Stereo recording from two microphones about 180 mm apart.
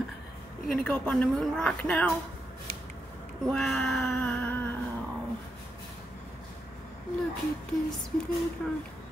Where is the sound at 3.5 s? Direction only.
Centre (ahead or behind).